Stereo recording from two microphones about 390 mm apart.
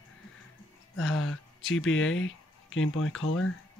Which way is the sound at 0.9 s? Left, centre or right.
Left.